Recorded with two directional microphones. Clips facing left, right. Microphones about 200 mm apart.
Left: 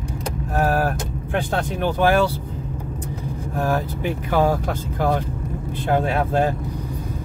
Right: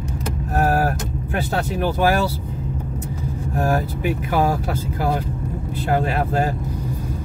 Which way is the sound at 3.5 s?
45° right (ahead or behind).